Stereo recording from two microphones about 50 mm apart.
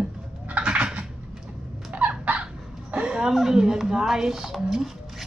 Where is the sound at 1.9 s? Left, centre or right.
Right.